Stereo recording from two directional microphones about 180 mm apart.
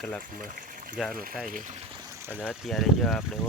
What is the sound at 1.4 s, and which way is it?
Speech, 50° right (ahead or behind).